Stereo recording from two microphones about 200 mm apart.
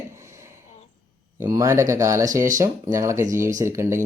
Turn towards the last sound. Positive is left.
turn(degrees=-15)  # may be behind; listen again after turning